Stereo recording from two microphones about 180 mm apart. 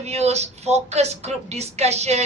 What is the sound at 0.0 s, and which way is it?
A woman's voice, 35° right (ahead or behind).